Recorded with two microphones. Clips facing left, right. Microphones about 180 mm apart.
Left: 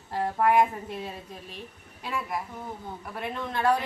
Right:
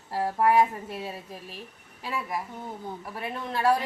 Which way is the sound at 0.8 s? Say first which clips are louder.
Even; 5° right (ahead or behind).